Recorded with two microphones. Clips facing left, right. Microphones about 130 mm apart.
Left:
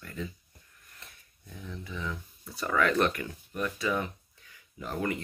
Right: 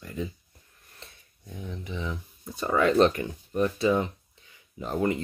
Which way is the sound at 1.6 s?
20° right (ahead or behind).